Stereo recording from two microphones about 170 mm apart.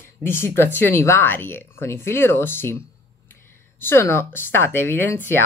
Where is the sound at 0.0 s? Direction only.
15° left (ahead or behind).